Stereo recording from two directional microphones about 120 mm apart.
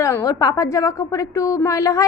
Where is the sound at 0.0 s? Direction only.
25° left (ahead or behind).